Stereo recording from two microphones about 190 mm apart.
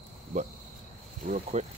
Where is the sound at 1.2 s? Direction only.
40° right (ahead or behind).